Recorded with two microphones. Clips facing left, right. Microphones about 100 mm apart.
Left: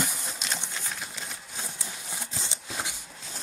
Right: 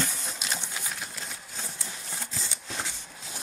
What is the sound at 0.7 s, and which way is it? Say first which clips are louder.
Sewing machine: even; 5° right (ahead or behind).